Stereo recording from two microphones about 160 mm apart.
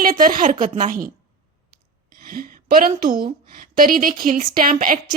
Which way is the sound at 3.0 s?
65° right (ahead or behind).